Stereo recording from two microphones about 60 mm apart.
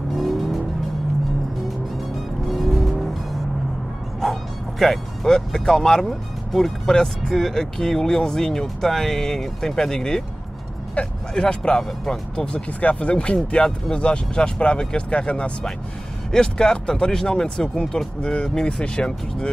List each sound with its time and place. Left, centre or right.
0.1 s car: centre
2.4 s vehicle: centre
4.2 s speech: centre